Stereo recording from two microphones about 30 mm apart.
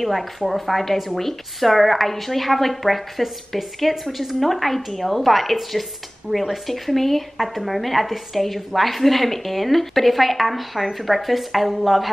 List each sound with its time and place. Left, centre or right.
0.0 s a woman's voice: centre